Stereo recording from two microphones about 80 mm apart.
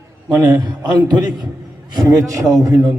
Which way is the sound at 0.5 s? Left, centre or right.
Right.